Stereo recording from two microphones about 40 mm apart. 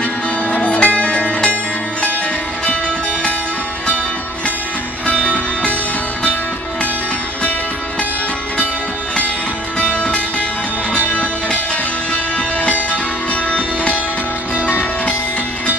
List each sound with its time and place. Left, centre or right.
0.5 s music: left
5.2 s music: left
9.8 s music: left
12.6 s music: left